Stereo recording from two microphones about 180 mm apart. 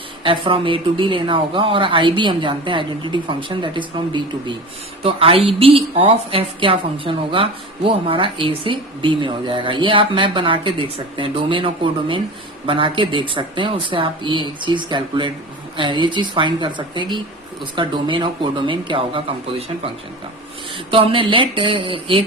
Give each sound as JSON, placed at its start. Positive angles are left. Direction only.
{"t": 0.2, "sound": "a woman's voice", "side_deg": -30}